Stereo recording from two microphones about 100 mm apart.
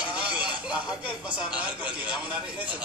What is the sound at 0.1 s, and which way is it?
Speech, 10° right (ahead or behind).